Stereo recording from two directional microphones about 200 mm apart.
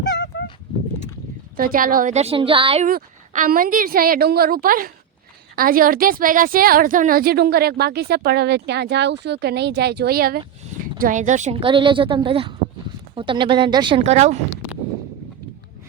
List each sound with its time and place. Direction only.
0.0 s a sound: 60° left (ahead or behind)
1.5 s a woman's voice: 45° right (ahead or behind); by 2.8 s 25° right (ahead or behind)
2.8 s a woman's voice: 40° right (ahead or behind)
11.0 s a woman's voice: 40° right (ahead or behind)
11.6 s a woman's voice: 25° right (ahead or behind)
14.0 s a woman's voice: 35° right (ahead or behind)